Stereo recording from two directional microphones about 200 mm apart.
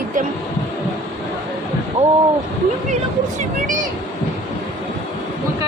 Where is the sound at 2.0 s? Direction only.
30° right (ahead or behind).